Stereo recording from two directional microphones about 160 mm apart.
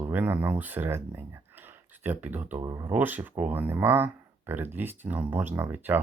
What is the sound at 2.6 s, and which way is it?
Speech, 20° right (ahead or behind).